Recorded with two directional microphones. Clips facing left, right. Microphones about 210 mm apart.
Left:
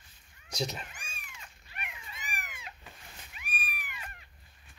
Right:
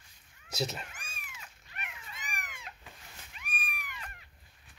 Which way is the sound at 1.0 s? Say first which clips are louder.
Even; 5° right (ahead or behind).